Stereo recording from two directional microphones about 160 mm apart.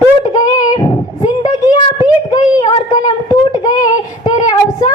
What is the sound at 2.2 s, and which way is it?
A woman's voice, 25° left (ahead or behind).